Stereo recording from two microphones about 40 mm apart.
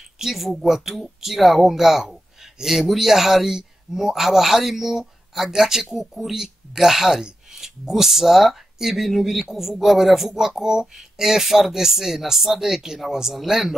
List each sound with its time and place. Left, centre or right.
0.2 s speech: centre